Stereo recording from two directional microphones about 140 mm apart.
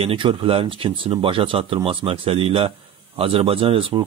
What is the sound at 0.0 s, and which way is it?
Speech, 40° right (ahead or behind).